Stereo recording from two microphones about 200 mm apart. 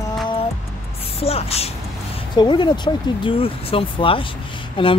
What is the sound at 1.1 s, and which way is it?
Speech, 30° left (ahead or behind).